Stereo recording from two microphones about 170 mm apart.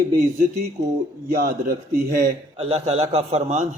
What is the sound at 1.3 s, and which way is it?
A man's voice, 60° right (ahead or behind).